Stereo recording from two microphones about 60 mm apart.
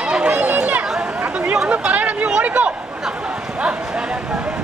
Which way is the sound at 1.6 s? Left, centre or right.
Right.